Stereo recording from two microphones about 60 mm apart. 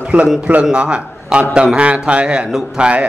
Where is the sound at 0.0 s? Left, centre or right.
Centre.